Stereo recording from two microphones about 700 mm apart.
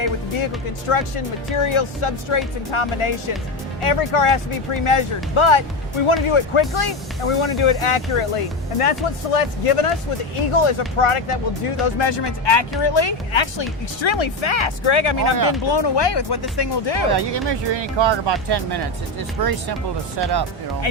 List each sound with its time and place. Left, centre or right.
0.0 s speech: left
17.1 s speech: right
20.9 s speech: left